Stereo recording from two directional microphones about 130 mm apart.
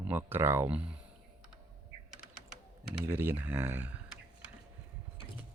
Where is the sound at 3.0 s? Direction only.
15° right (ahead or behind).